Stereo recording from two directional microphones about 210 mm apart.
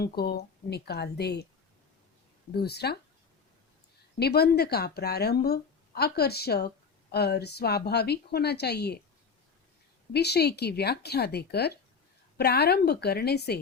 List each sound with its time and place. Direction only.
0.0 s speech: 50° left (ahead or behind)
2.5 s speech: 50° left (ahead or behind)
4.2 s speech: 50° left (ahead or behind)
10.1 s speech: 50° left (ahead or behind)